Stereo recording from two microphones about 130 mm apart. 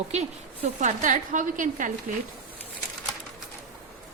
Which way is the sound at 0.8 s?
85° right.